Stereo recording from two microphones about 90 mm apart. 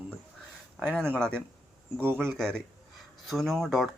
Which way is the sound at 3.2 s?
Centre (ahead or behind).